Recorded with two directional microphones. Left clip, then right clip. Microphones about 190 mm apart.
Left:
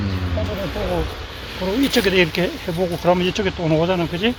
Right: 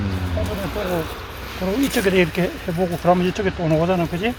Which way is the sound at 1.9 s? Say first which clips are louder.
Left 2 dB; 40° left (ahead or behind).